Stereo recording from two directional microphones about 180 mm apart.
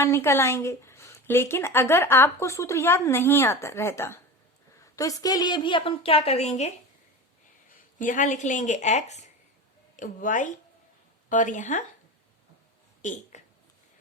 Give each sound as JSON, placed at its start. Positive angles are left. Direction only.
{"t": 0.0, "sound": "a woman's voice", "side_deg": 15}
{"t": 7.9, "sound": "a woman's voice", "side_deg": 45}
{"t": 13.0, "sound": "a sound", "side_deg": 45}